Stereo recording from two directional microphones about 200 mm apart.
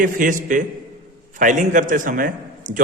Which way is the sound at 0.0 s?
40° right (ahead or behind).